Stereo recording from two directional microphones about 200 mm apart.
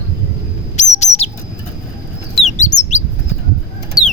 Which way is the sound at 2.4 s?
35° left (ahead or behind).